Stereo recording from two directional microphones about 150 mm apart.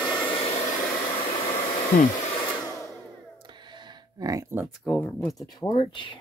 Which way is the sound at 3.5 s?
30° right (ahead or behind).